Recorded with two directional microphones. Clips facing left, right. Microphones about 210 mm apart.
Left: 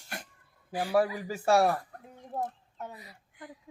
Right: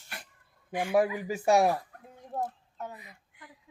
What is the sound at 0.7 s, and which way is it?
Speech, 35° left (ahead or behind).